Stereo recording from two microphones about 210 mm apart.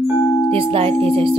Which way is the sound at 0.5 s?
25° right (ahead or behind).